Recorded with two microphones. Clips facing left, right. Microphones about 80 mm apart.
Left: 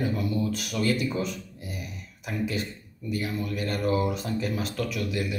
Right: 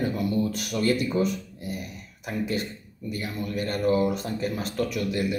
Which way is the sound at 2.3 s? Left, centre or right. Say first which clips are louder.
Right 1 dB; right.